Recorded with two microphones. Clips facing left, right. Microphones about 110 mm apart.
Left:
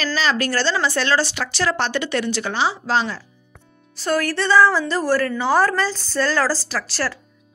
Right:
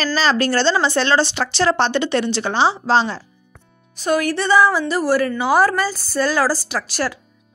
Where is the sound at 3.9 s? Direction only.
15° right (ahead or behind).